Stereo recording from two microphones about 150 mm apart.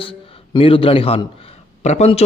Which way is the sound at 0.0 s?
35° left (ahead or behind).